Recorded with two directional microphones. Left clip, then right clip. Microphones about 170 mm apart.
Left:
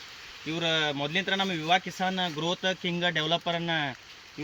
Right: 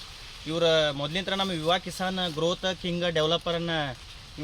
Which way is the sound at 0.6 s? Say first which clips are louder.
Right 4 dB; 30° right (ahead or behind).